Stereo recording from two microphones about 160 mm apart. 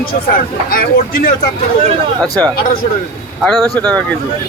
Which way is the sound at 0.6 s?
65° left (ahead or behind).